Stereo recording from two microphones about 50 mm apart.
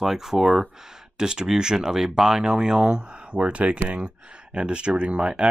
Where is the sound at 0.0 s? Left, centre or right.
Centre.